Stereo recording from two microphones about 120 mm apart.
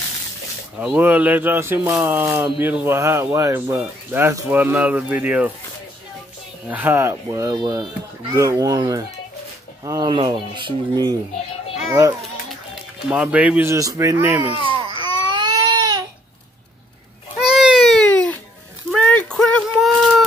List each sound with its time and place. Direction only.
0.7 s speech: 15° right (ahead or behind)
6.7 s a man's voice: 15° right (ahead or behind)
7.2 s speech: 35° right (ahead or behind)
11.9 s a man's voice: 25° right (ahead or behind)
13.1 s speech: 10° right (ahead or behind)
13.7 s a man's voice: 25° right (ahead or behind)
14.5 s baby cry: 45° right (ahead or behind)
17.4 s baby cry: 5° right (ahead or behind)
18.1 s music: 10° left (ahead or behind)
18.9 s a sound: 10° left (ahead or behind)